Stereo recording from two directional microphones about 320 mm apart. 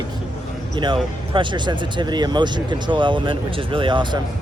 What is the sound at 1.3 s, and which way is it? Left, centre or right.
Speech, centre.